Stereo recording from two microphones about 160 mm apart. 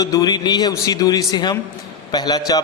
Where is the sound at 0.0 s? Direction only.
25° left (ahead or behind).